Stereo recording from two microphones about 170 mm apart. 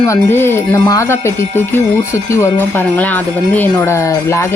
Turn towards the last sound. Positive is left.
turn(degrees=15)  # may be behind; listen again after turning